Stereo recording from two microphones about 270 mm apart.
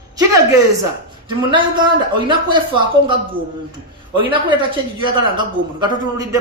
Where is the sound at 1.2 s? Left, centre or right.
Centre.